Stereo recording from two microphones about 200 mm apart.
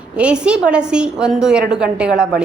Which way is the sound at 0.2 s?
5° right (ahead or behind).